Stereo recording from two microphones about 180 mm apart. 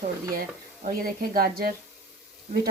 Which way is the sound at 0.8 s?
55° right (ahead or behind).